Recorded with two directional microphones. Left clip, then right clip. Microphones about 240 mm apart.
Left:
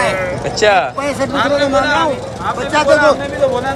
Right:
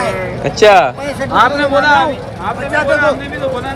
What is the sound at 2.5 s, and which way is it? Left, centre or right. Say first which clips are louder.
Speech: left 1 dB; left.